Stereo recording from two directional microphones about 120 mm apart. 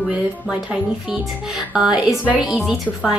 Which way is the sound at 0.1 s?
10° right (ahead or behind).